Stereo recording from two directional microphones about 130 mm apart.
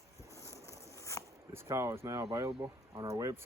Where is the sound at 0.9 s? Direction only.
20° left (ahead or behind).